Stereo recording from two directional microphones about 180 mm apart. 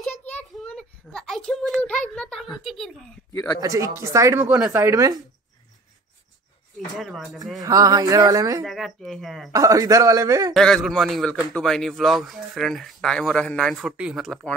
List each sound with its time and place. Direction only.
0.4 s a sound: 5° left (ahead or behind)
3.6 s speech: 20° right (ahead or behind)
7.0 s a man's voice: centre (ahead or behind)
7.6 s speech: 20° right (ahead or behind)
8.6 s a man's voice: centre (ahead or behind)
9.5 s speech: 20° right (ahead or behind)
10.5 s a man's voice: 5° left (ahead or behind)